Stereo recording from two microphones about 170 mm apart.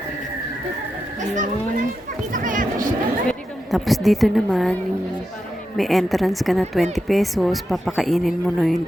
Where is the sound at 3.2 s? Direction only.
Centre (ahead or behind).